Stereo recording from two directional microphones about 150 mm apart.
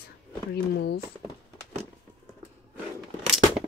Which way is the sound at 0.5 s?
90° left.